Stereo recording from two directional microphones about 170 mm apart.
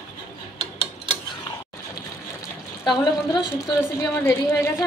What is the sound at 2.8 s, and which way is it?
Speech, 30° left (ahead or behind).